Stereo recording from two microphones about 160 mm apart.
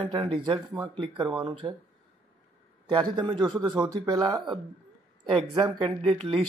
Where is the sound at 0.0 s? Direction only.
30° right (ahead or behind).